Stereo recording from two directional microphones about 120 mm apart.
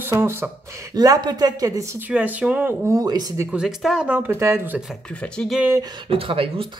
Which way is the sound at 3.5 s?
5° right (ahead or behind).